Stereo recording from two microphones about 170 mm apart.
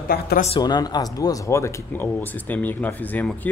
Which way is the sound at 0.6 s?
25° left (ahead or behind).